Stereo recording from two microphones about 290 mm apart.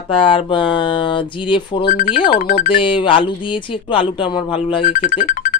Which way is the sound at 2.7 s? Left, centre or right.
Centre.